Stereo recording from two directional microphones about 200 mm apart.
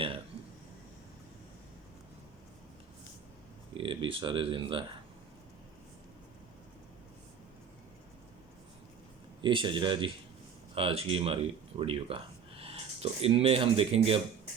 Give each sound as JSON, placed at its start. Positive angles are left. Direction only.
{"t": 3.8, "sound": "speech", "side_deg": -25}
{"t": 9.4, "sound": "speech", "side_deg": -25}